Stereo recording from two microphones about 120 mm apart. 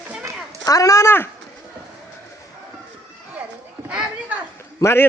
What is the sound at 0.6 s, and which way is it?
Speech, 30° left (ahead or behind).